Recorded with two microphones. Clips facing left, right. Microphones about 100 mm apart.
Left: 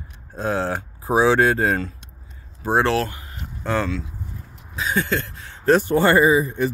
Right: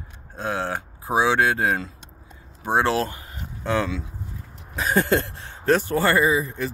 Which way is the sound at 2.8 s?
25° right (ahead or behind).